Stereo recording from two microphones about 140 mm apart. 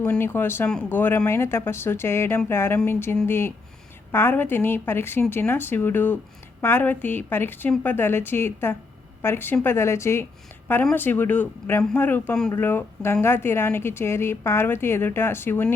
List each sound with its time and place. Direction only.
0.0 s a woman's voice: 15° left (ahead or behind)